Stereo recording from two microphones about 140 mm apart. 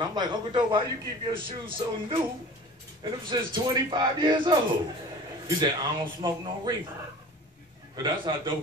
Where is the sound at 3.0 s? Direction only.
30° right (ahead or behind).